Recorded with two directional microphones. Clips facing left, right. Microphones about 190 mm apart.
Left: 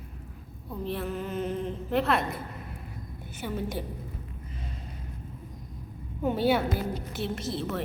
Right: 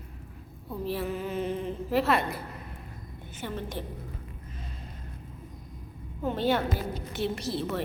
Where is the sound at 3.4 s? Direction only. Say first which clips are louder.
Left 3 dB; 5° left (ahead or behind).